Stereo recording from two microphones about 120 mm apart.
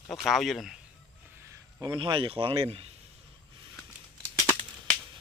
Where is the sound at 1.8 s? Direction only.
40° right (ahead or behind).